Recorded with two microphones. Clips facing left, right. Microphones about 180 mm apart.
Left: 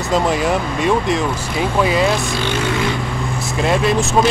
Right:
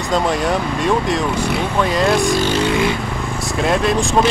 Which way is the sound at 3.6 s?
Centre (ahead or behind).